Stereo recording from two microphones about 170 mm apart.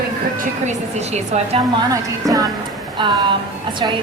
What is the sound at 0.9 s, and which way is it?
Speech, 40° right (ahead or behind).